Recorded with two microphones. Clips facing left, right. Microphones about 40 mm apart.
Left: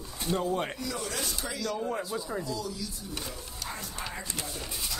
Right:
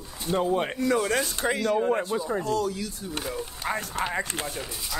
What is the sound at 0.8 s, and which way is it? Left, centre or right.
Speech, right.